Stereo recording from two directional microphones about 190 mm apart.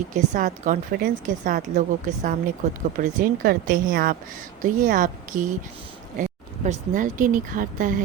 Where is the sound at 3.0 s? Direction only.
45° right (ahead or behind).